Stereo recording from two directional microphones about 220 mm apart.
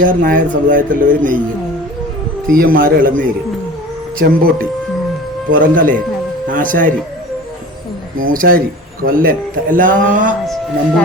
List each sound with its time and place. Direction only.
0.0 s speech: 40° right (ahead or behind)
2.5 s speech: 40° right (ahead or behind)
8.3 s speech: 40° right (ahead or behind)